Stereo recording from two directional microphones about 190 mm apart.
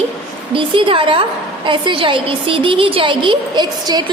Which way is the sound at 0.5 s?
25° right (ahead or behind).